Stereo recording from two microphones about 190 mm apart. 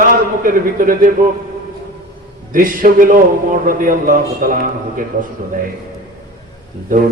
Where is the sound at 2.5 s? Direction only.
45° right (ahead or behind).